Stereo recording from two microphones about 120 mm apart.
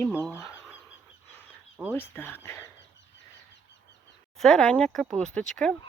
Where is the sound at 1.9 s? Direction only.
20° left (ahead or behind).